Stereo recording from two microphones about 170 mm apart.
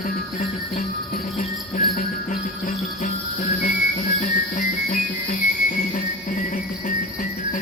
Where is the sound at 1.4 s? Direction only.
50° left (ahead or behind).